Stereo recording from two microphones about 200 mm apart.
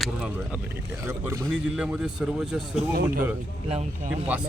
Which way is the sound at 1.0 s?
10° right (ahead or behind).